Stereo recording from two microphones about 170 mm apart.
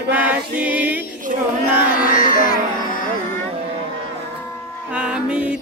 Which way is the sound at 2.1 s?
55° left (ahead or behind).